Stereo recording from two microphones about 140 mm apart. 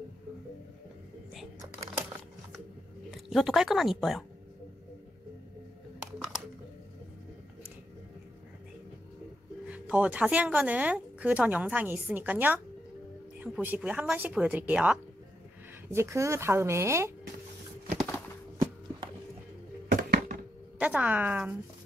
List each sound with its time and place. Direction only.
3.1 s a woman's voice: centre (ahead or behind)
9.7 s speech: 10° right (ahead or behind)
19.9 s a sound: 85° right
20.8 s speech: 10° right (ahead or behind)